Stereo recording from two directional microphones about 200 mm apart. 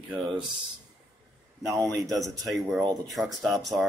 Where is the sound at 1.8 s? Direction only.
15° right (ahead or behind).